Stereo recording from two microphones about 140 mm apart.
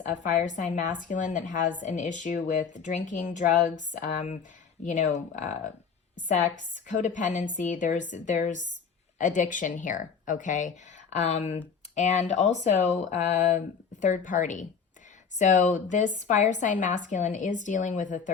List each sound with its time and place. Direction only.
0.1 s speech: 60° left (ahead or behind)